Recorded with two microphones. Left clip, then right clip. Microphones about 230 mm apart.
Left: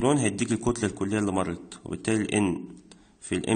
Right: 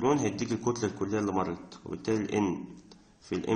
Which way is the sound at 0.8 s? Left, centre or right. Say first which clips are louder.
Left 3 dB; left.